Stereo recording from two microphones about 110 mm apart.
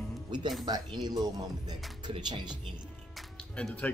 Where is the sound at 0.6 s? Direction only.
40° right (ahead or behind).